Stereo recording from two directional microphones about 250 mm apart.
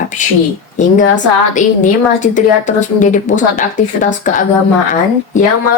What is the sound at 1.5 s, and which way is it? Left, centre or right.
A woman's voice, left.